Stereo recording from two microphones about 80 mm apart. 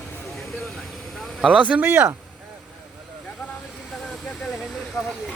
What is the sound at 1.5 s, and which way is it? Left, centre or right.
Speech, centre.